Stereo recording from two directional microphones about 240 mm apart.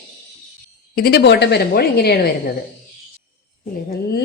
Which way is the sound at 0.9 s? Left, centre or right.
Left.